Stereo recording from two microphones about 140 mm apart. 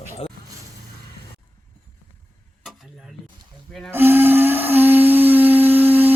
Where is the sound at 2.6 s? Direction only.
Centre (ahead or behind).